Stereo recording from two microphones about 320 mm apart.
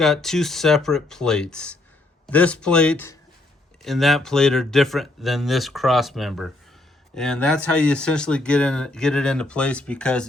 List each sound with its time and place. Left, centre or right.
0.0 s speech: centre